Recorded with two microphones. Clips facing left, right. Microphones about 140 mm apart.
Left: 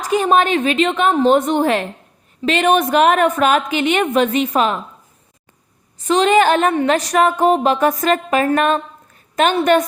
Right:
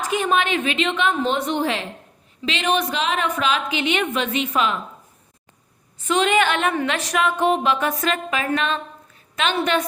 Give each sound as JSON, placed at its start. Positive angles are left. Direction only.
{"t": 0.0, "sound": "a woman's voice", "side_deg": 40}
{"t": 6.1, "sound": "a woman's voice", "side_deg": 40}